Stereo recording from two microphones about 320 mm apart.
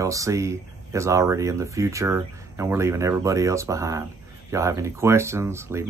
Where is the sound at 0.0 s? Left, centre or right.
Centre.